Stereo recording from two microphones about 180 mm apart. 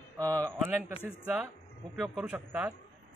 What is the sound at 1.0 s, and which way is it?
A man's voice, 10° right (ahead or behind).